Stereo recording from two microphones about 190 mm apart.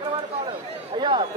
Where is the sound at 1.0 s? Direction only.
20° right (ahead or behind).